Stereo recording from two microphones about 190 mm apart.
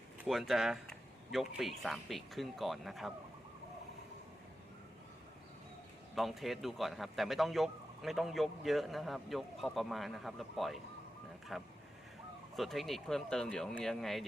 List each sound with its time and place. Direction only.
0.2 s speech: centre (ahead or behind)
6.1 s speech: centre (ahead or behind)